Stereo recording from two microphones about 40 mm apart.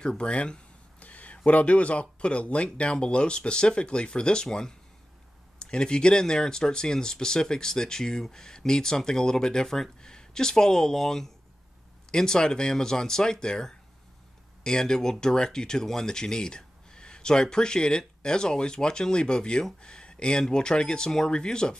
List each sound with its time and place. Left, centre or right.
0.0 s speech: left